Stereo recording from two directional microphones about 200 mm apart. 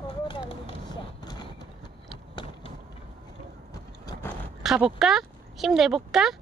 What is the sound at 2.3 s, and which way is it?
Vehicle, 25° left (ahead or behind).